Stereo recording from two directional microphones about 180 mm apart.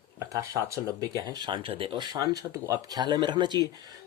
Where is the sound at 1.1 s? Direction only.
20° right (ahead or behind).